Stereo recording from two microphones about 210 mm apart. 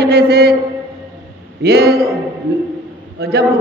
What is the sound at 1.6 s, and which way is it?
Speech, 50° right (ahead or behind).